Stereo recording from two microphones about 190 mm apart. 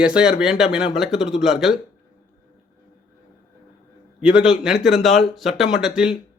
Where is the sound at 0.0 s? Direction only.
5° right (ahead or behind).